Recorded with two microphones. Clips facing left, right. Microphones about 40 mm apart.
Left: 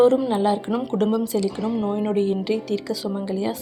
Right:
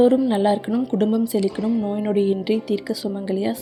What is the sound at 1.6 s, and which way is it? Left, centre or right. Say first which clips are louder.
Speech: right 2 dB; left.